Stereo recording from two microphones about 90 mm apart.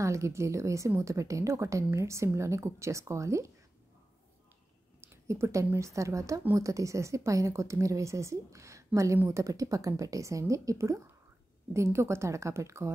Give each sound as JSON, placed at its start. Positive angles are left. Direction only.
{"t": 0.0, "sound": "a woman's voice", "side_deg": -35}
{"t": 5.0, "sound": "a woman's voice", "side_deg": -30}